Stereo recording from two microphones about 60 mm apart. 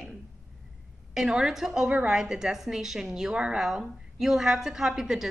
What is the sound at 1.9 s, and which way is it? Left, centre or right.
Speech, centre.